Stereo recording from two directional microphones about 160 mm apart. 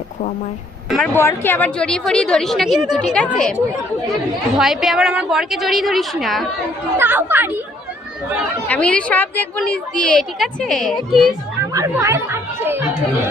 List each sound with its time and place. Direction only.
0.9 s speech: centre (ahead or behind)
1.1 s a woman's voice: 15° left (ahead or behind)
4.5 s a woman's voice: centre (ahead or behind)
6.9 s speech: 10° right (ahead or behind)
8.6 s a woman's voice: 10° left (ahead or behind)
11.7 s speech: 20° right (ahead or behind)